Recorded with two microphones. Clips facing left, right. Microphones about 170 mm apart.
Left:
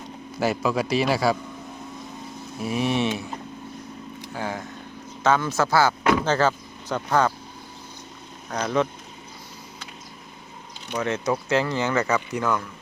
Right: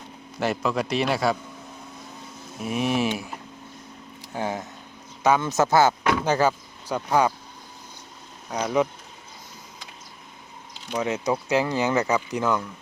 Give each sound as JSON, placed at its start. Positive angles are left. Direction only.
{"t": 0.3, "sound": "a man's voice", "side_deg": 5}
{"t": 2.6, "sound": "a man's voice", "side_deg": 0}
{"t": 4.4, "sound": "speech", "side_deg": -20}
{"t": 8.4, "sound": "speech", "side_deg": -10}
{"t": 10.9, "sound": "speech", "side_deg": -15}